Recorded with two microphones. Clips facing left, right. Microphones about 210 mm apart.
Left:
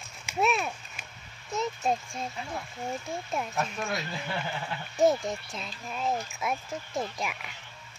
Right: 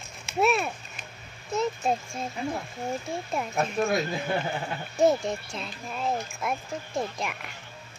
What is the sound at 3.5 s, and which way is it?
Speech, 40° right (ahead or behind).